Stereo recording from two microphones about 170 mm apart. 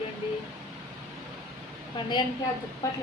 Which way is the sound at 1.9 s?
25° left (ahead or behind).